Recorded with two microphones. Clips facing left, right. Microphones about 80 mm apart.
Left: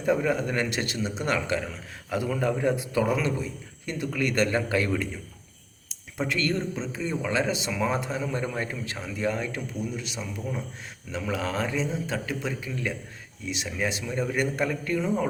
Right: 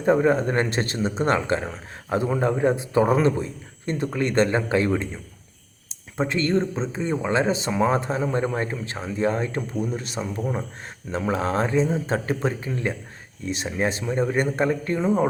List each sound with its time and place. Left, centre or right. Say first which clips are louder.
0.0 s speech: right 6 dB; right